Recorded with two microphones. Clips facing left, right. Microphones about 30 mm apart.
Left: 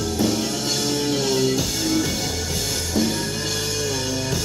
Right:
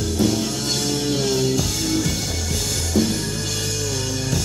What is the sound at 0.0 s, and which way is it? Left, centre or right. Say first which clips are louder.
Music: right 1 dB; centre.